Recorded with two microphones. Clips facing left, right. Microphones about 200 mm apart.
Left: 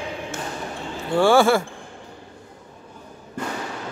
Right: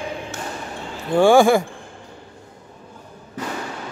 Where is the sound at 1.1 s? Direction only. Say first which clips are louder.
Right 3 dB; 15° right (ahead or behind).